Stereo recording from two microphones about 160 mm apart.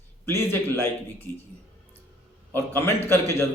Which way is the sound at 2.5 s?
15° left (ahead or behind).